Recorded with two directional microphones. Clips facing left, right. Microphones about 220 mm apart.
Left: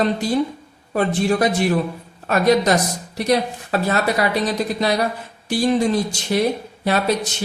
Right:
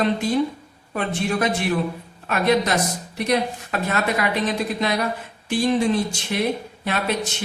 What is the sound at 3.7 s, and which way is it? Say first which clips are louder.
Speech: left 5 dB; 35° left (ahead or behind).